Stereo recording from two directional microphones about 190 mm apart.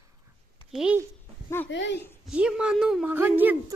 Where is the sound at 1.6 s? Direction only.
70° left (ahead or behind).